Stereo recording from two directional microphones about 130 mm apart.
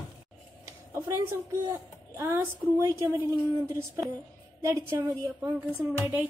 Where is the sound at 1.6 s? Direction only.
20° right (ahead or behind).